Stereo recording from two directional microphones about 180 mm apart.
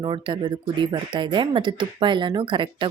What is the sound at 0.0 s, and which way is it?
Speech, 25° right (ahead or behind).